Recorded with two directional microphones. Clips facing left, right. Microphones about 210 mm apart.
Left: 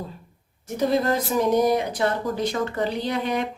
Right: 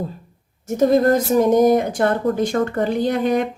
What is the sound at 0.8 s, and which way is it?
Speech, 45° right (ahead or behind).